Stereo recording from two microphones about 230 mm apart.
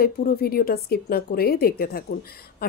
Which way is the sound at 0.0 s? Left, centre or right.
Left.